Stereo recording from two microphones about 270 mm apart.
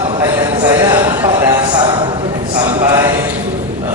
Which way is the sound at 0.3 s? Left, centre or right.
Centre.